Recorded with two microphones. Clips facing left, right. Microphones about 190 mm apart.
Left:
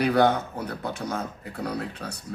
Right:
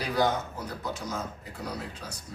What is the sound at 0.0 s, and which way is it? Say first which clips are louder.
A man's voice: left 6 dB; 60° left (ahead or behind).